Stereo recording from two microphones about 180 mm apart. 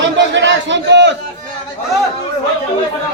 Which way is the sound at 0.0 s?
85° right.